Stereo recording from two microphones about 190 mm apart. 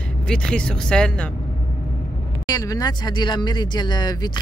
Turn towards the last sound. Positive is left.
turn(degrees=20)  # may be behind; listen again after turning